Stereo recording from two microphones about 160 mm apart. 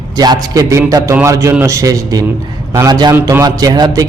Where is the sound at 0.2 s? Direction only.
25° right (ahead or behind).